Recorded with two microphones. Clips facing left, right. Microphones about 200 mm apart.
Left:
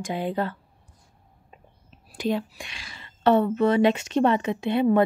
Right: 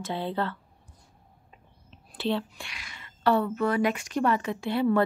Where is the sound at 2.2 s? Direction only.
15° left (ahead or behind).